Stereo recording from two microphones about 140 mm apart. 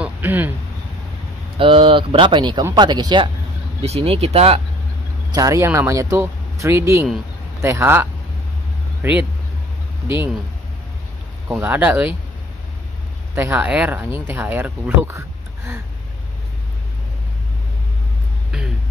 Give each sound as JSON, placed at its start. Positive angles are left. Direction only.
{"t": 0.0, "sound": "a sound", "side_deg": -15}
{"t": 1.6, "sound": "speech", "side_deg": -40}
{"t": 3.8, "sound": "speech", "side_deg": -45}
{"t": 5.3, "sound": "speech", "side_deg": -25}
{"t": 11.5, "sound": "speech", "side_deg": -10}
{"t": 13.3, "sound": "speech", "side_deg": -15}